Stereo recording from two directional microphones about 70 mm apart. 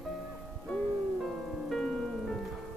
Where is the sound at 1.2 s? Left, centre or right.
Centre.